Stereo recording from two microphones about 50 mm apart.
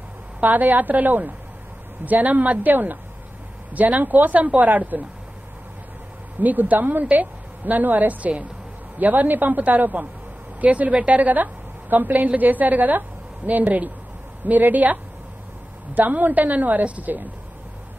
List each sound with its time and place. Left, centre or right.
0.4 s a woman's voice: right
6.4 s a woman's voice: right